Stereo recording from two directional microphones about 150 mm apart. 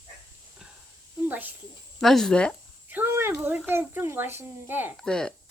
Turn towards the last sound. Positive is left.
turn(degrees=5)  # may be behind; listen again after turning